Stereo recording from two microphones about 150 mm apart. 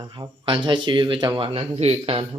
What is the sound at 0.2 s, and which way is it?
Speech, 30° right (ahead or behind).